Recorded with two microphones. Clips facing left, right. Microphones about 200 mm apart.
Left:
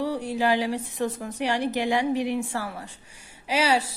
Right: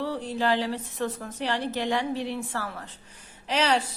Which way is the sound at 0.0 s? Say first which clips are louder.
Left 3 dB; 10° left (ahead or behind).